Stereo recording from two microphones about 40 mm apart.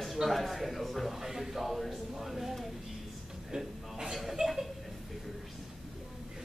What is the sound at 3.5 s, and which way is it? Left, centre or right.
A man's voice, centre.